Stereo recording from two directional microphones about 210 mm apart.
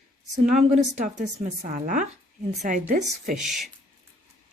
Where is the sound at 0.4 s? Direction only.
40° right (ahead or behind).